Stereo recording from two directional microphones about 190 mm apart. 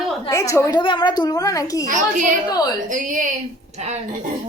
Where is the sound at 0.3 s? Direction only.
15° left (ahead or behind).